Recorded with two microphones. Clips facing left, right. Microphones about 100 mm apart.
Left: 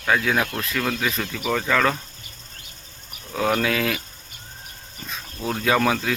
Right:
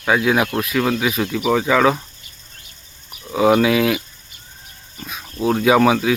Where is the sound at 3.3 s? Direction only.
10° right (ahead or behind).